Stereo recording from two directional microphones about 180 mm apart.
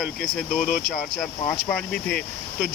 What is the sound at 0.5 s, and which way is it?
Speech, 55° left (ahead or behind).